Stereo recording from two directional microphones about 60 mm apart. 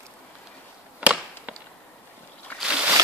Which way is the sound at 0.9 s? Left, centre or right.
Right.